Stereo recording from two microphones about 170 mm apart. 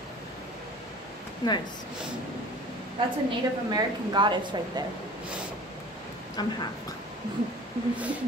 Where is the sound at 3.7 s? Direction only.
25° right (ahead or behind).